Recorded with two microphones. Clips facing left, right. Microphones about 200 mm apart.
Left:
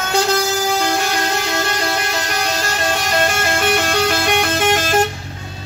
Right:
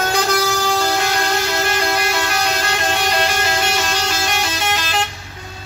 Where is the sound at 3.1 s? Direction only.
50° left (ahead or behind).